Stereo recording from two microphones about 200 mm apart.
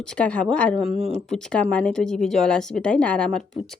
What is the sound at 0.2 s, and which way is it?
Speech, 5° left (ahead or behind).